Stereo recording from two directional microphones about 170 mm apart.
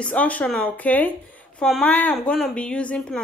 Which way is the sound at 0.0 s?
10° left (ahead or behind).